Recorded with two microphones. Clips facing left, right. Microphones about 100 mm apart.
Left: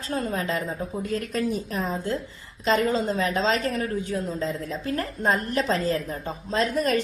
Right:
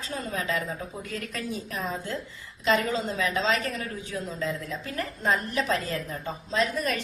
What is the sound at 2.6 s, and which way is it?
A woman's voice, 45° left (ahead or behind).